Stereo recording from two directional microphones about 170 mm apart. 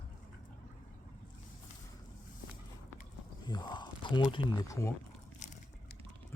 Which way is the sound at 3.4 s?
25° left (ahead or behind).